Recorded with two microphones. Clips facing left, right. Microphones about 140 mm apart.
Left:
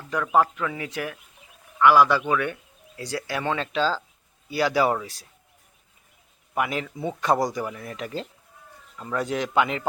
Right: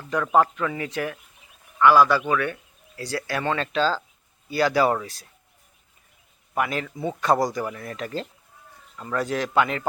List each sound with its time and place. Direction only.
0.1 s speech: centre (ahead or behind)
6.5 s speech: 15° left (ahead or behind)